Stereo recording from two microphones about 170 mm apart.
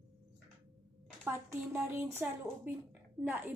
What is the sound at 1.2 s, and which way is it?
Speech, 15° right (ahead or behind).